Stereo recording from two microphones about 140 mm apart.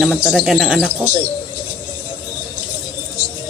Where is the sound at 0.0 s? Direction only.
5° right (ahead or behind).